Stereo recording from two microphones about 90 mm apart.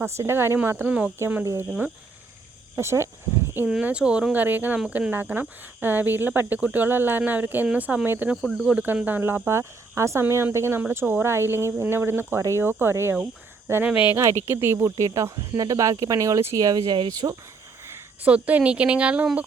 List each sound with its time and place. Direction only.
0.0 s speech: 30° right (ahead or behind)
2.7 s speech: 30° right (ahead or behind)
3.7 s speech: 10° right (ahead or behind)
8.4 s speech: 5° left (ahead or behind)
8.6 s speech: 15° right (ahead or behind)
9.5 s speech: 35° right (ahead or behind)
16.6 s speech: 45° right (ahead or behind)
17.8 s a sound: 30° right (ahead or behind)
18.3 s speech: 15° right (ahead or behind)